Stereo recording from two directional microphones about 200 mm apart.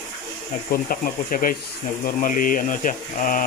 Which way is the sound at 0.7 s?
45° left (ahead or behind).